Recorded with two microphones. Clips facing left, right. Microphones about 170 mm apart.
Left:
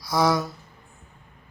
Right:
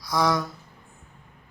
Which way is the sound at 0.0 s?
5° left (ahead or behind).